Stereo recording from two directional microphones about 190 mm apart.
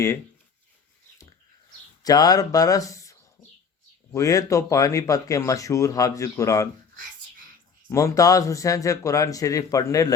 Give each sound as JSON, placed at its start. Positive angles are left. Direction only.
{"t": 2.0, "sound": "speech", "side_deg": 20}
{"t": 7.9, "sound": "speech", "side_deg": 15}